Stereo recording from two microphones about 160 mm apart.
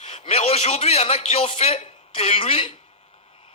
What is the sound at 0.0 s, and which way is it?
A man's voice, 45° left (ahead or behind).